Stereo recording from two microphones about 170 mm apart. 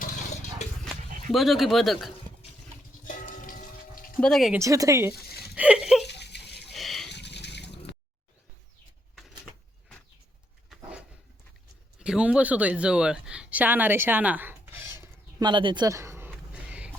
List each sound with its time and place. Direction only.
0.0 s a sound: 40° left (ahead or behind)
1.3 s speech: centre (ahead or behind)
3.1 s music: 50° left (ahead or behind)
4.2 s speech: centre (ahead or behind)
4.5 s speech: 20° right (ahead or behind)
5.4 s a sound: 5° right (ahead or behind)
6.1 s water: 80° left
6.7 s wild animals: centre (ahead or behind)
7.1 s trickle: 85° left
10.7 s a sound: 5° right (ahead or behind)